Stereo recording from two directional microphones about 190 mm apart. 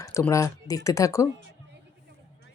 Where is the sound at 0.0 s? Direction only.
15° left (ahead or behind).